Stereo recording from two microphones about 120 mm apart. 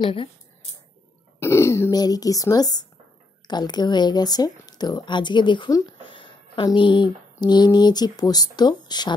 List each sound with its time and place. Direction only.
0.0 s speech: 45° left (ahead or behind)
1.4 s speech: 20° left (ahead or behind)